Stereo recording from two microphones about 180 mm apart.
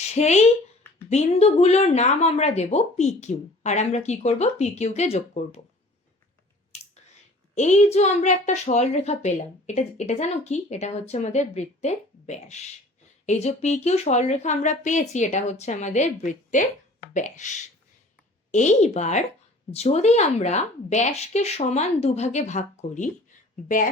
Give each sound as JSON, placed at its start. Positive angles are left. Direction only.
{"t": 0.0, "sound": "a woman's voice", "side_deg": 40}
{"t": 6.7, "sound": "clicking", "side_deg": 35}
{"t": 7.5, "sound": "a woman's voice", "side_deg": 40}